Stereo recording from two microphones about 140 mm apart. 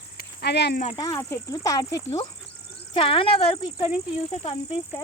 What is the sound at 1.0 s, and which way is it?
Speech, 20° left (ahead or behind).